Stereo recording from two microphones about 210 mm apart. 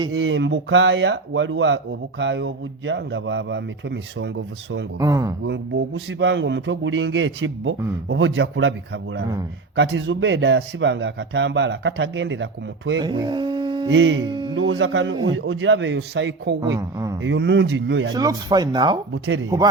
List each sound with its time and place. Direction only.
0.1 s speech: 70° right (ahead or behind)
4.9 s speech: 15° right (ahead or behind)
5.5 s speech: 60° right (ahead or behind)
9.7 s speech: 55° right (ahead or behind)
13.0 s speech: 20° right (ahead or behind)
13.9 s speech: 60° right (ahead or behind)
14.2 s speech: 20° right (ahead or behind)
14.5 s speech: 70° right (ahead or behind)
16.7 s speech: 15° right (ahead or behind)
17.2 s speech: 55° right (ahead or behind)
18.1 s speech: 15° right (ahead or behind)
19.1 s speech: 65° right (ahead or behind)